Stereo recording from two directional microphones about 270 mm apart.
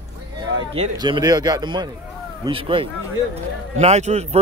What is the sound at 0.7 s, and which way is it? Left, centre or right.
Speech, centre.